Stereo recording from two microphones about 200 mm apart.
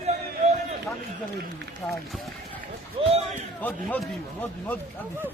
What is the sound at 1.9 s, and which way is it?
Speech, centre (ahead or behind).